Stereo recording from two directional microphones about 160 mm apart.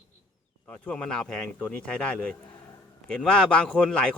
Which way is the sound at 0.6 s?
5° left (ahead or behind).